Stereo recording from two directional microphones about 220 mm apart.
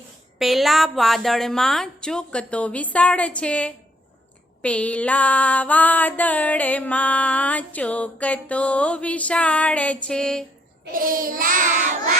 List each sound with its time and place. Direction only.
0.3 s a woman's voice: centre (ahead or behind)
4.6 s music: 5° left (ahead or behind)
10.9 s child singing: 40° right (ahead or behind)